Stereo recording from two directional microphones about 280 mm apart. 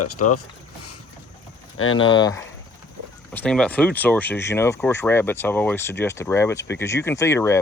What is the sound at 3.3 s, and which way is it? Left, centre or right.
Speech, centre.